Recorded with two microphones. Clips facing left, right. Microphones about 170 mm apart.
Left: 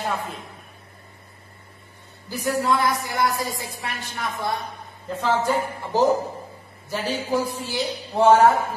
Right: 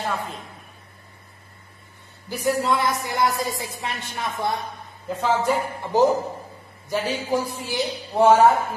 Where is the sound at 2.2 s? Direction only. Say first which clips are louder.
Right 1 dB; 20° right (ahead or behind).